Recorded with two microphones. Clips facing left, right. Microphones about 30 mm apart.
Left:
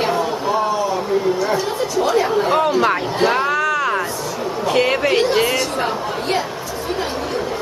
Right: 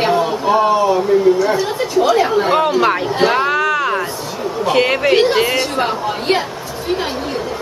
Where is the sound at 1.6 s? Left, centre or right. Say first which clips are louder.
Right 3 dB; right.